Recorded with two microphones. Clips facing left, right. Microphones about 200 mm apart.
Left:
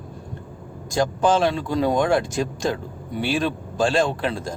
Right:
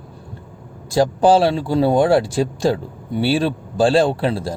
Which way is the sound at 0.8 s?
35° right (ahead or behind).